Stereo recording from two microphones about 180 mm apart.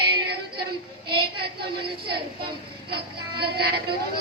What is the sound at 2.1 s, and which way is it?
A woman's voice, 60° right (ahead or behind).